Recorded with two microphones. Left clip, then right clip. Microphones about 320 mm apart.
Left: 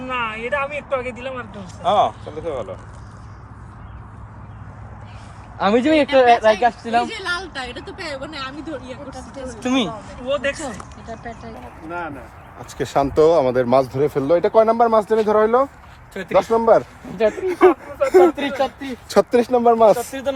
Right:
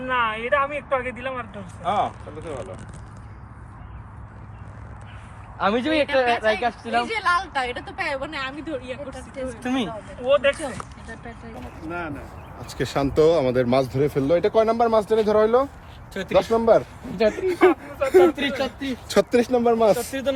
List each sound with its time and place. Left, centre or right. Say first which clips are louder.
0.1 s speech: right 1 dB; centre
1.8 s speech: left 7 dB; left
5.5 s speech: left 5 dB; left
7.1 s speech: right 4 dB; centre
9.6 s speech: left 7 dB; left
10.2 s speech: right 3 dB; centre
11.9 s speech: left 3 dB; centre
17.6 s speech: left 5 dB; centre